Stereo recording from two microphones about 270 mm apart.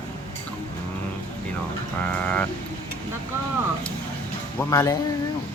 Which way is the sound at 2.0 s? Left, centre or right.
Centre.